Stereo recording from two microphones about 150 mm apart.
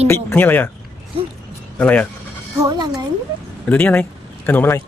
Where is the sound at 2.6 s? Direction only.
25° right (ahead or behind).